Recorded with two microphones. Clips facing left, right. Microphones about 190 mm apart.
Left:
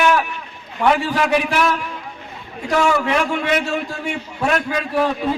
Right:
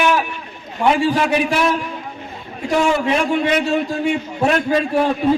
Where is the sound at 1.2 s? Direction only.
30° right (ahead or behind).